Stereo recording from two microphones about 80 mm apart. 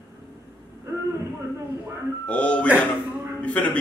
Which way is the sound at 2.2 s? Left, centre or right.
Centre.